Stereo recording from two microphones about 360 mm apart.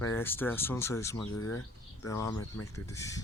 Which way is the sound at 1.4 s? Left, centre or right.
Left.